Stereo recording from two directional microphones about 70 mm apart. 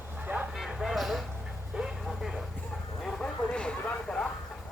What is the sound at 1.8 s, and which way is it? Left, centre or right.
Vehicle, centre.